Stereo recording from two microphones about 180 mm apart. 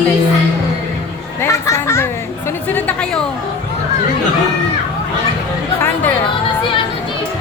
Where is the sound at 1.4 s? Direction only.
15° left (ahead or behind).